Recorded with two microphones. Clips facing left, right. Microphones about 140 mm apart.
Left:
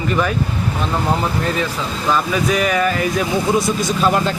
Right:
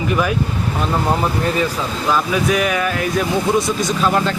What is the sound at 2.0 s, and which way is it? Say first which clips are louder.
A man's voice: even; 5° right (ahead or behind).